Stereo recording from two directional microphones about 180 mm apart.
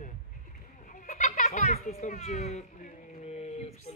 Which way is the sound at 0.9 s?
45° left (ahead or behind).